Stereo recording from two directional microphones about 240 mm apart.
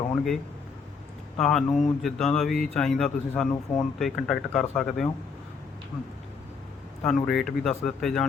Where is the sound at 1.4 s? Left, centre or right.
Centre.